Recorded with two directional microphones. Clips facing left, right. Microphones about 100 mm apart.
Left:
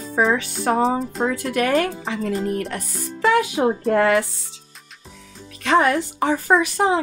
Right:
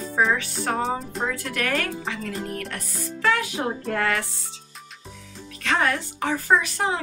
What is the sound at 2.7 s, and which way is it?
A woman's voice, 20° left (ahead or behind).